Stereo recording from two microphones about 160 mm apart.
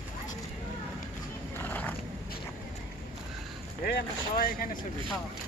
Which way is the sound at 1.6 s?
10° left (ahead or behind).